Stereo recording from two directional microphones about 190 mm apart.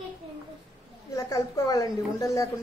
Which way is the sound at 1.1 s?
20° left (ahead or behind).